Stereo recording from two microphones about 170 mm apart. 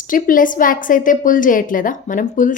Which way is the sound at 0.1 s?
50° left (ahead or behind).